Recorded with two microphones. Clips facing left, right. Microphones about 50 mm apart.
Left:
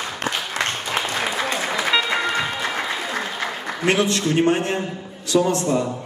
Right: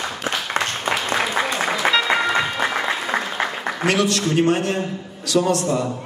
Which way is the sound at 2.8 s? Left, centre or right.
Right.